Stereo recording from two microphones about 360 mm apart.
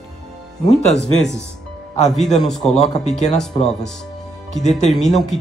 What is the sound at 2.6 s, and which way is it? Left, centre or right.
Speech, centre.